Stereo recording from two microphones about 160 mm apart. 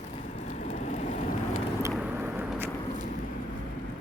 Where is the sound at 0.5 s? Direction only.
45° left (ahead or behind).